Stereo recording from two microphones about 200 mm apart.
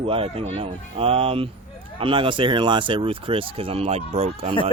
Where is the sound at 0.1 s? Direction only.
30° right (ahead or behind).